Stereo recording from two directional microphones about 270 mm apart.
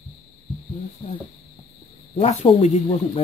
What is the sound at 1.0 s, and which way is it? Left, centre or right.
Speech, centre.